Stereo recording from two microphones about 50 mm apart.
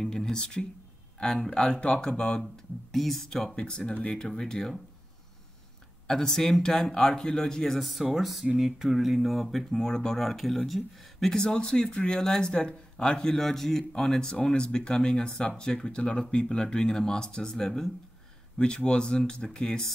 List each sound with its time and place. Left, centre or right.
0.0 s speech: centre
2.9 s speech: centre
3.6 s speech: centre
6.0 s speech: centre